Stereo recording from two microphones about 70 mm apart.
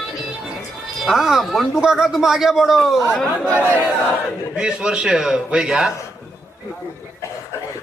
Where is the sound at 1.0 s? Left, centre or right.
Centre.